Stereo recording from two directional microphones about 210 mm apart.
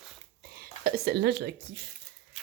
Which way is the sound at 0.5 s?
45° right (ahead or behind).